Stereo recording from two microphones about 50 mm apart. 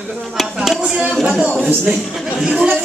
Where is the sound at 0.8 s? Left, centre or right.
Centre.